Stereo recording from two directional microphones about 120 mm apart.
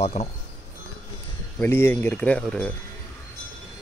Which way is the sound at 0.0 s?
65° left (ahead or behind).